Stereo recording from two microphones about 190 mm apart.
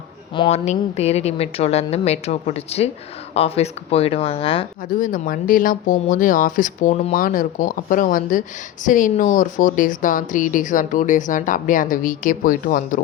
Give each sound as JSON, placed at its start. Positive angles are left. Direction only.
{"t": 0.4, "sound": "speech", "side_deg": 35}
{"t": 4.9, "sound": "speech", "side_deg": 45}